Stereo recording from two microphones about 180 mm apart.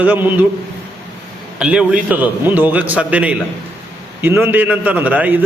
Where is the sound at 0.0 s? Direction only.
10° right (ahead or behind).